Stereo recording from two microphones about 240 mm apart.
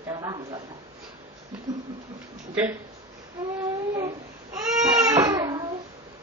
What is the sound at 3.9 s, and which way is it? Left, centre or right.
Baby cry, centre.